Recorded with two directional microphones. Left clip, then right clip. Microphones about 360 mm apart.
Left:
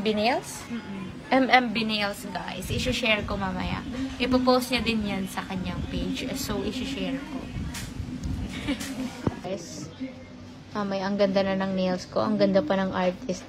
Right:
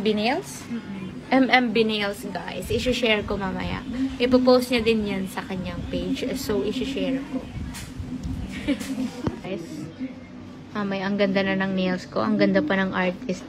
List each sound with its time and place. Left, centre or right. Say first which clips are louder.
0.0 s a woman's voice: right 1 dB; centre
1.7 s a woman's voice: right 5 dB; centre
10.7 s a woman's voice: right 1 dB; centre